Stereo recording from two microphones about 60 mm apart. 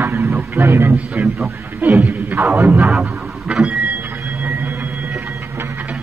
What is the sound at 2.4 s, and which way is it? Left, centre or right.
Speech, right.